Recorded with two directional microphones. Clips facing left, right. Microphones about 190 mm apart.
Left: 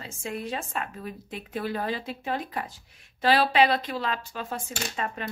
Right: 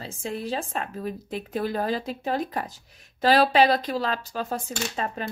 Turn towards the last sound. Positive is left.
turn(degrees=-35)  # may be behind; listen again after turning